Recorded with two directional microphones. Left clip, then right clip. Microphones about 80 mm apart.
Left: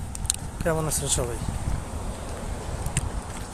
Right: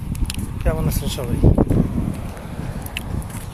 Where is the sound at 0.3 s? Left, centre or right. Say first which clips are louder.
Even; left.